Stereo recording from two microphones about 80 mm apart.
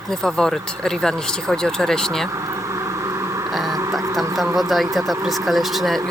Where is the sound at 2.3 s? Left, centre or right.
Right.